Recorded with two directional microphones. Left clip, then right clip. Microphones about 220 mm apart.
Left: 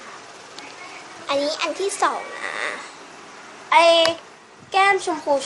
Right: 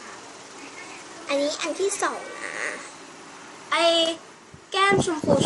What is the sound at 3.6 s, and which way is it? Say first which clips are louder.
A child's voice: left 6 dB; 20° right (ahead or behind).